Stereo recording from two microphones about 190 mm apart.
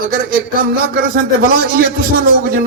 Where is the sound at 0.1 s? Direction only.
50° right (ahead or behind).